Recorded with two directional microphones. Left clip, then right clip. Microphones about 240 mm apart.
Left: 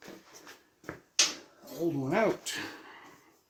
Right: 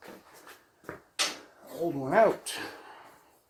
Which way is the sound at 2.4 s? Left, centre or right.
Left.